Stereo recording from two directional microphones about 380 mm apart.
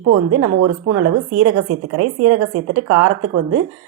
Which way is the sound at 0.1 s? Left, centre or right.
Right.